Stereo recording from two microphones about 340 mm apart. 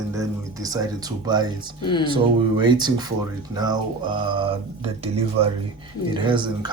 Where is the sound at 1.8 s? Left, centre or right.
Centre.